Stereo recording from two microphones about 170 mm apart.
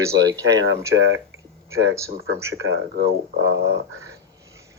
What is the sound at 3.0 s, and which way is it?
Speech, 90° right.